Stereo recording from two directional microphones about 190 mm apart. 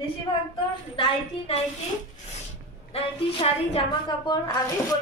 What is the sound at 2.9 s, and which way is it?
A woman's voice, 30° left (ahead or behind).